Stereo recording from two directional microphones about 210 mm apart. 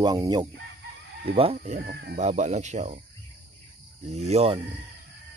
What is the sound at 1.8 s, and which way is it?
Speech, 50° right (ahead or behind).